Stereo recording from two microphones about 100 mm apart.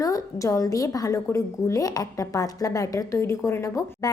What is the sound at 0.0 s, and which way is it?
A woman's voice, 35° left (ahead or behind).